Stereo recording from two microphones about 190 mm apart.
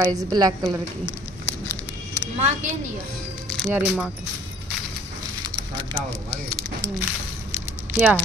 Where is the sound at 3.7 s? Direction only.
5° right (ahead or behind).